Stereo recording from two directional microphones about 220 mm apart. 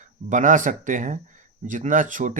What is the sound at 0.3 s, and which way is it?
Speech, 35° right (ahead or behind).